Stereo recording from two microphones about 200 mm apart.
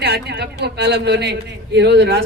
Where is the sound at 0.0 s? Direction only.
55° right (ahead or behind).